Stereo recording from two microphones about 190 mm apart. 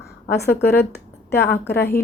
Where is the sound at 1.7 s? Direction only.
10° left (ahead or behind).